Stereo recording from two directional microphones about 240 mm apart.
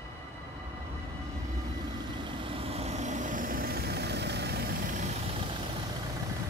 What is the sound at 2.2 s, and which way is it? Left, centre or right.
Vehicle, right.